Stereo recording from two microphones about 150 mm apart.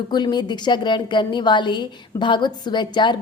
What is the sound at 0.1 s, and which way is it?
A woman's voice, 30° left (ahead or behind).